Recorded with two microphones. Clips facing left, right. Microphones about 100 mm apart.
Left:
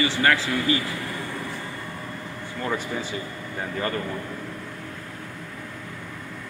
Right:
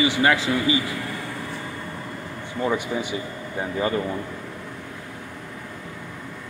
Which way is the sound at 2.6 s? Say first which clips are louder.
Right 4 dB; 15° right (ahead or behind).